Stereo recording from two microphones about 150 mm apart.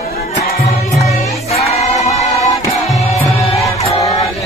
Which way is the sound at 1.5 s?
50° left (ahead or behind).